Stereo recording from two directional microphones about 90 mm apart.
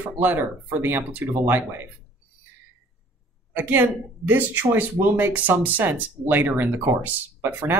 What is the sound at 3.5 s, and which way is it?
Speech, 20° right (ahead or behind).